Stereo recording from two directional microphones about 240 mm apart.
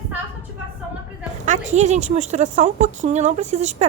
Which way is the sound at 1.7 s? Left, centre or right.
Right.